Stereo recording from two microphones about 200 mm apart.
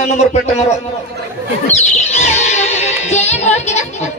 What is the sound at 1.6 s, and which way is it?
Music, 35° left (ahead or behind).